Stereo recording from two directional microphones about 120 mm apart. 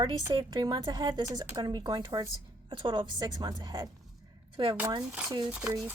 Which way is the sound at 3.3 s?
35° right (ahead or behind).